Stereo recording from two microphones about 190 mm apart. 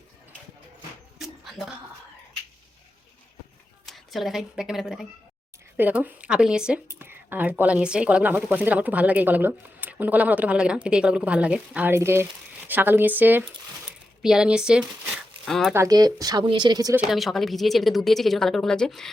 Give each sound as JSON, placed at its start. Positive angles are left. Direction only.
{"t": 1.2, "sound": "a sound", "side_deg": 0}
{"t": 3.8, "sound": "a woman's voice", "side_deg": 0}
{"t": 15.7, "sound": "speech", "side_deg": -15}
{"t": 16.9, "sound": "speech", "side_deg": 0}